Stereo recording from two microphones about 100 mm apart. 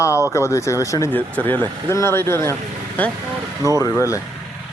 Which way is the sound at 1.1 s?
15° left (ahead or behind).